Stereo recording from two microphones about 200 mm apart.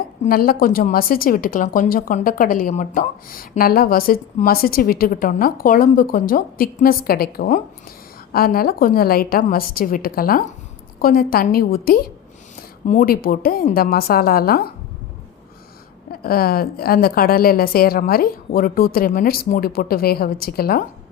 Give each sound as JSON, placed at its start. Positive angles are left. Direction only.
{"t": 0.3, "sound": "a woman's voice", "side_deg": 45}
{"t": 16.2, "sound": "a woman's voice", "side_deg": 50}